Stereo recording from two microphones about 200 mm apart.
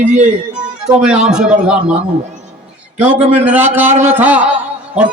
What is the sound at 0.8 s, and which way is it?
A man's voice, 5° right (ahead or behind).